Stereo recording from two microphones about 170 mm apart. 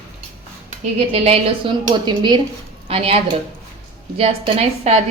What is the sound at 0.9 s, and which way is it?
A woman's voice, 35° right (ahead or behind).